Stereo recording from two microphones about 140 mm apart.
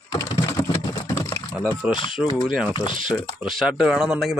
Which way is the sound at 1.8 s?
10° right (ahead or behind).